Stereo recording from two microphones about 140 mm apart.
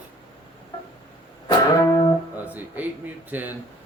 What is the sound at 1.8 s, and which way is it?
Music, 25° left (ahead or behind).